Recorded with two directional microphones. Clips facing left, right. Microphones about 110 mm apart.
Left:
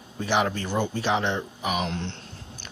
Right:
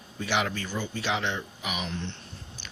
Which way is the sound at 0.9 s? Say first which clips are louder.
Left 5 dB; 40° left (ahead or behind).